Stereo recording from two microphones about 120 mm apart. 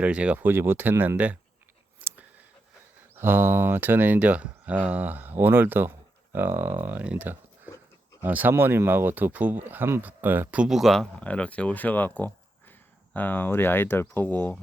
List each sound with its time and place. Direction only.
0.0 s speech: 10° right (ahead or behind)
2.0 s a sound: 15° right (ahead or behind)
3.2 s speech: 15° right (ahead or behind); by 14.6 s 15° left (ahead or behind)